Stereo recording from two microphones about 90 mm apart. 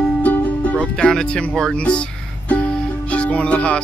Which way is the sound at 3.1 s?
15° left (ahead or behind).